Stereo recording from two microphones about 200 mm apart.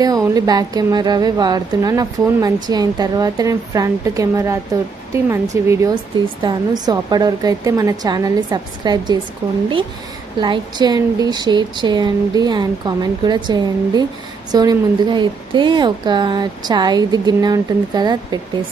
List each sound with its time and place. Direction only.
0.0 s a woman's voice: 20° right (ahead or behind)
10.4 s a woman's voice: 20° right (ahead or behind)